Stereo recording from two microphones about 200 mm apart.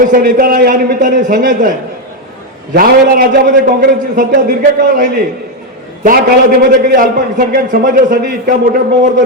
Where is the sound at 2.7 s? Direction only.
50° right (ahead or behind).